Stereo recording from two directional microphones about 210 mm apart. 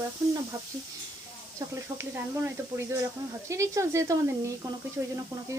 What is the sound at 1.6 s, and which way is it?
Speech, 15° right (ahead or behind).